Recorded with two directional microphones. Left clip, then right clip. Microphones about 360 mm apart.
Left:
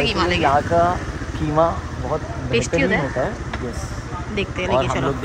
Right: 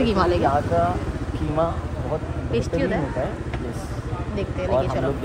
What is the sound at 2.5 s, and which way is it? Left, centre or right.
Speech, centre.